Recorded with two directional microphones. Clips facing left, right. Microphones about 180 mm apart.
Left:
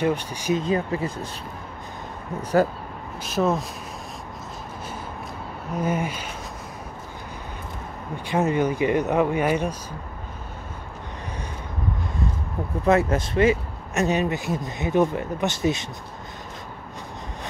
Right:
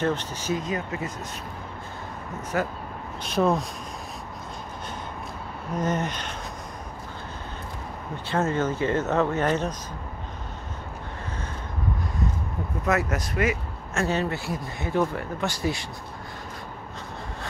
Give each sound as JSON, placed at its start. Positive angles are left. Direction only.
{"t": 0.0, "sound": "speech", "side_deg": 10}
{"t": 0.6, "sound": "speech", "side_deg": 30}
{"t": 3.3, "sound": "speech", "side_deg": 0}
{"t": 5.8, "sound": "speech", "side_deg": 10}
{"t": 8.3, "sound": "speech", "side_deg": 15}
{"t": 12.8, "sound": "speech", "side_deg": 30}